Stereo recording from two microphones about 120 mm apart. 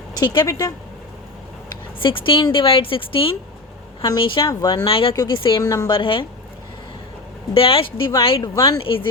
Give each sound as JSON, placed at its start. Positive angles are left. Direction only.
{"t": 0.1, "sound": "speech", "side_deg": 35}
{"t": 2.0, "sound": "a woman's voice", "side_deg": 45}
{"t": 4.9, "sound": "a woman's voice", "side_deg": 50}
{"t": 5.1, "sound": "speech", "side_deg": 35}
{"t": 6.0, "sound": "a woman's voice", "side_deg": 45}
{"t": 7.5, "sound": "a woman's voice", "side_deg": 50}